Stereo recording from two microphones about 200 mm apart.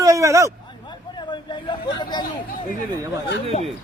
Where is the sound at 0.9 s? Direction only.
20° left (ahead or behind).